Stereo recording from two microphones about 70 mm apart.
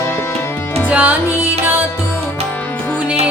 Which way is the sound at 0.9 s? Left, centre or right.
Right.